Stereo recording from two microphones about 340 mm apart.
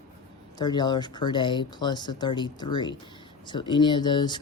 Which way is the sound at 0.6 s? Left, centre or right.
Centre.